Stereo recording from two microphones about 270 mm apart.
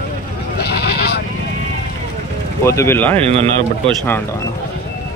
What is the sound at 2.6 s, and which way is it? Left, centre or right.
Speech, centre.